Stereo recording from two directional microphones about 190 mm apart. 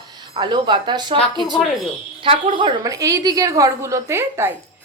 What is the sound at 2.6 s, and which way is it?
A woman's voice, 20° right (ahead or behind).